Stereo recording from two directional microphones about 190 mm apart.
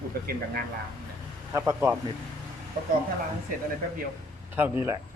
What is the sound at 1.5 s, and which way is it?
Speech, 15° right (ahead or behind).